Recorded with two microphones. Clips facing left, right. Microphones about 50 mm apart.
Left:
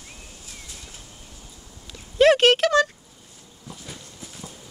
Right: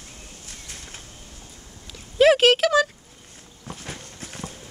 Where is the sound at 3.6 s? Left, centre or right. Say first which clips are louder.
Right 4 dB; right.